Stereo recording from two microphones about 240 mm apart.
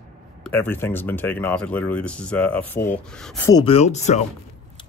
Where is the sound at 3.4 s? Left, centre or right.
Centre.